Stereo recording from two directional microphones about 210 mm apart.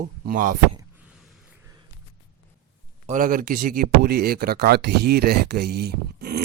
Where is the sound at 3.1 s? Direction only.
40° right (ahead or behind).